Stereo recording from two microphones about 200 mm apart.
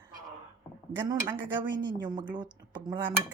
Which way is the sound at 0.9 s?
20° right (ahead or behind).